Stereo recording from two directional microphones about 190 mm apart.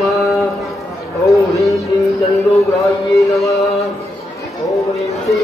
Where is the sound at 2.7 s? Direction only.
Centre (ahead or behind).